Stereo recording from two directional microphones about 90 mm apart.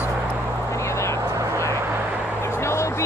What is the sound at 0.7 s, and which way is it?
Vehicle, 30° left (ahead or behind).